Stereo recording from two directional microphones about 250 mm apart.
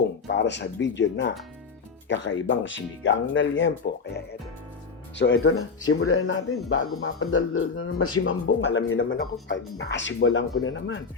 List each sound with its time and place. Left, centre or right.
0.3 s speech: left
5.1 s speech: left